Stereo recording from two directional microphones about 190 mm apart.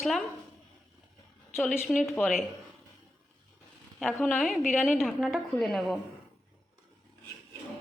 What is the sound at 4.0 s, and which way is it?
A woman's voice, 5° left (ahead or behind).